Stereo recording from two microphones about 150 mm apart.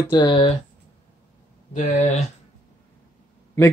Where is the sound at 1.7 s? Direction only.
55° left (ahead or behind).